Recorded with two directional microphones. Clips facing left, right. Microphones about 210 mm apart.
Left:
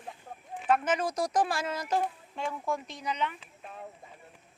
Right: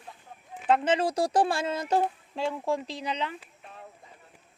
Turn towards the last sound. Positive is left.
turn(degrees=-30)  # may be behind; listen again after turning